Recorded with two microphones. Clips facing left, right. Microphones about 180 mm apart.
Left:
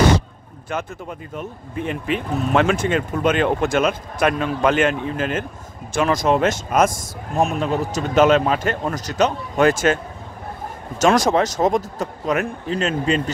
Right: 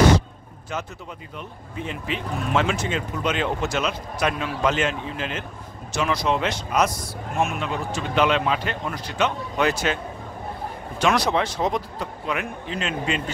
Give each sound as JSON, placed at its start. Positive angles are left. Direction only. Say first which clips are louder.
{"t": 0.7, "sound": "speech", "louder": "left 5 dB", "side_deg": 55}
{"t": 11.0, "sound": "speech", "louder": "left 5 dB", "side_deg": 45}